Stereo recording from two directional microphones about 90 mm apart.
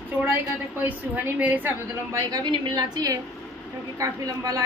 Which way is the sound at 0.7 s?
20° right (ahead or behind).